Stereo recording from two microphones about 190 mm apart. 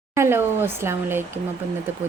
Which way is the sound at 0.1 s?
15° right (ahead or behind).